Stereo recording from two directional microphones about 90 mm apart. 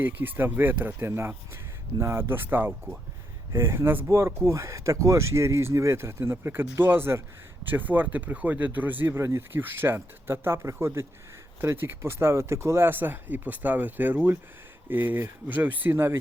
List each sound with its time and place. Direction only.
0.0 s speech: 20° right (ahead or behind)